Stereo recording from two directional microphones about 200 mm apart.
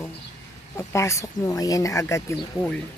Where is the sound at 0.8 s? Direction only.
15° left (ahead or behind).